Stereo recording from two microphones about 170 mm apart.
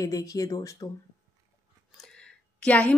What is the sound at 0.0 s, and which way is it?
Speech, 20° left (ahead or behind).